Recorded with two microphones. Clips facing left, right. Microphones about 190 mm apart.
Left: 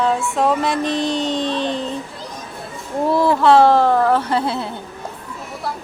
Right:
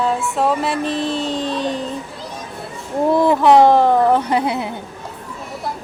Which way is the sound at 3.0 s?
20° right (ahead or behind).